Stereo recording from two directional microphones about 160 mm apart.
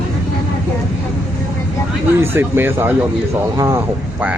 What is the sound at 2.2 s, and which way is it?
Speech, 15° right (ahead or behind).